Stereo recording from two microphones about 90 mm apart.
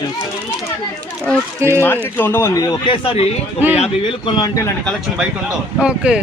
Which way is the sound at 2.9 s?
75° left (ahead or behind).